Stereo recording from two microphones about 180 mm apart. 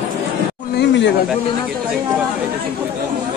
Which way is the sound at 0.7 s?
75° left (ahead or behind).